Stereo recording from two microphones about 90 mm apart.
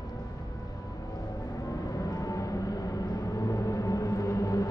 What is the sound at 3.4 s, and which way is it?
Music, 40° left (ahead or behind).